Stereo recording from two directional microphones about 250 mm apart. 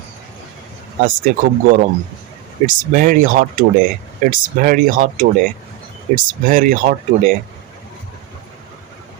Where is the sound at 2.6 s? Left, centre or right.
Right.